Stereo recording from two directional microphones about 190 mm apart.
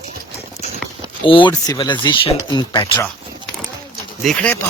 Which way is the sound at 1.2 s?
25° left (ahead or behind).